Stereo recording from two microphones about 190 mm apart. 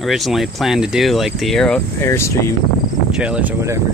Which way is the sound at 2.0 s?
15° left (ahead or behind).